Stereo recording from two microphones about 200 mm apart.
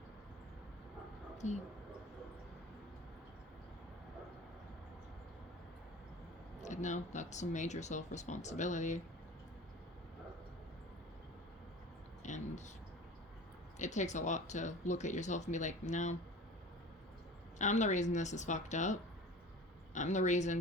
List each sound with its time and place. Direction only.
1.4 s speech: 35° left (ahead or behind)
6.6 s speech: 35° left (ahead or behind)
12.2 s a sound: 35° left (ahead or behind)
13.7 s speech: 35° left (ahead or behind)
17.6 s speech: 35° left (ahead or behind)